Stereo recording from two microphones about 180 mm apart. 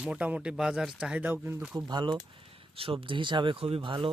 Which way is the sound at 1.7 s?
25° right (ahead or behind).